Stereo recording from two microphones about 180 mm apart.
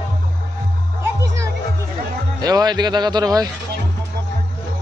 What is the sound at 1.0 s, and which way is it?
Music, 15° right (ahead or behind).